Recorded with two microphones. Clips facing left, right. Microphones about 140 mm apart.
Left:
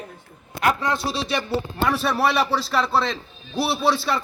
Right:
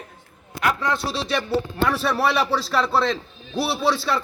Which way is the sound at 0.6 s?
45° left (ahead or behind).